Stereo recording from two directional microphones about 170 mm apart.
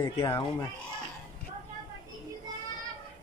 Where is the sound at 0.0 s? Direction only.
20° left (ahead or behind).